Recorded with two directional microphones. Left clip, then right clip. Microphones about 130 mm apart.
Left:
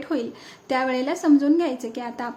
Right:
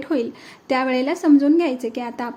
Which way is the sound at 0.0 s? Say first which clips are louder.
Right 4 dB; 25° right (ahead or behind).